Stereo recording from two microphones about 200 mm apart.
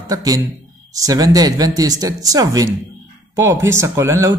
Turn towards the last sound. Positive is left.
turn(degrees=-15)  # may be behind; listen again after turning